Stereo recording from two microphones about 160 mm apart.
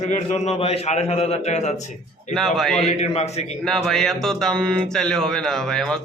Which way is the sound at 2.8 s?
45° left (ahead or behind).